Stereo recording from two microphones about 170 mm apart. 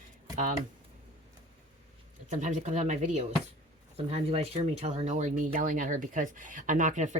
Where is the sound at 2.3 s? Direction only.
45° right (ahead or behind).